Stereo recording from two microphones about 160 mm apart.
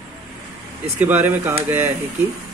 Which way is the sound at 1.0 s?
10° right (ahead or behind).